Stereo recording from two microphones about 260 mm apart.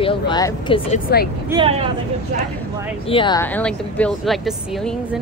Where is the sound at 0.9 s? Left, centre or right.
Left.